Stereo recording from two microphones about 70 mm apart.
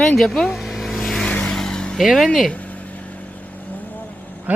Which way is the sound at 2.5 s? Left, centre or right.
Centre.